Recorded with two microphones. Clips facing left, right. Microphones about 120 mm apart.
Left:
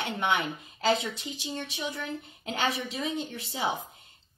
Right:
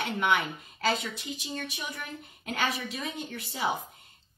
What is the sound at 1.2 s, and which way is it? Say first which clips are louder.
Speech: left 1 dB; 25° left (ahead or behind).